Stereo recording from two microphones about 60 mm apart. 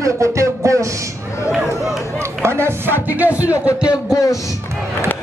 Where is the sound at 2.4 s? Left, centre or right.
Right.